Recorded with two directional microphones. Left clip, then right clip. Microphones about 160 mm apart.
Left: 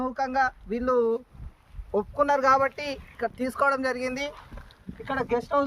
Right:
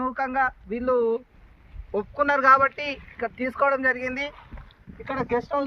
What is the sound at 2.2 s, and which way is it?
Speech, 90° left.